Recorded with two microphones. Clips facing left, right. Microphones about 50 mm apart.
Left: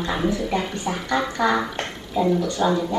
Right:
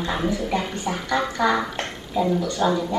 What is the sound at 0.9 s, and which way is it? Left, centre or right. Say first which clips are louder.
Speech: even; centre.